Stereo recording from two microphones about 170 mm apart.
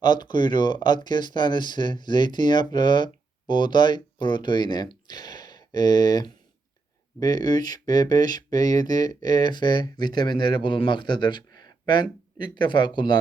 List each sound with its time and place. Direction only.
0.0 s speech: 25° left (ahead or behind)